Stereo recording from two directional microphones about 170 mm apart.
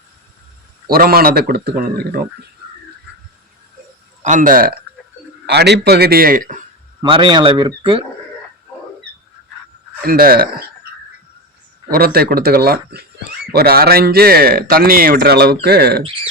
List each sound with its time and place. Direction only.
0.9 s a man's voice: 60° right (ahead or behind)
4.2 s a man's voice: 45° right (ahead or behind)
5.5 s a man's voice: 80° right; by 6.6 s 55° right (ahead or behind)
7.0 s speech: 25° right (ahead or behind)
10.0 s a man's voice: 60° right (ahead or behind)
11.9 s a man's voice: 60° right (ahead or behind)